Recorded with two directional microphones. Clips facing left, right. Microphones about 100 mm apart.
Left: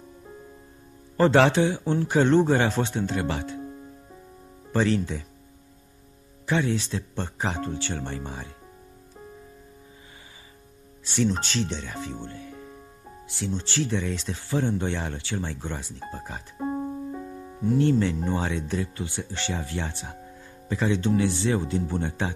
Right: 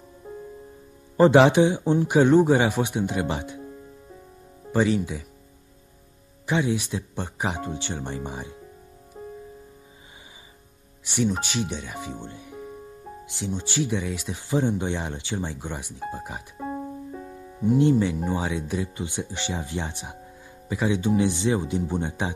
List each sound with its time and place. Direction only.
1.1 s speech: 15° right (ahead or behind)
4.7 s speech: 15° right (ahead or behind)
6.4 s speech: 15° right (ahead or behind)
11.1 s speech: 15° right (ahead or behind)
17.6 s speech: 15° right (ahead or behind)